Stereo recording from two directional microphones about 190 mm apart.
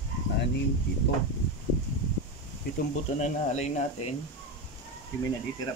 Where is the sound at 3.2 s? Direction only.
35° left (ahead or behind).